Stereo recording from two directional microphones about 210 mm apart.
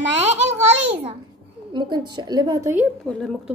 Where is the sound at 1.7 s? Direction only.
20° right (ahead or behind).